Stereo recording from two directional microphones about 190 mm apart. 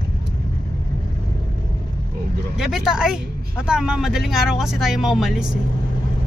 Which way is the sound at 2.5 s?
Centre (ahead or behind).